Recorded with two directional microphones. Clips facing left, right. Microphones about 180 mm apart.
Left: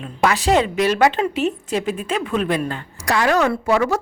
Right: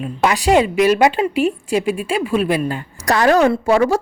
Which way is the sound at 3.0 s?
40° right (ahead or behind).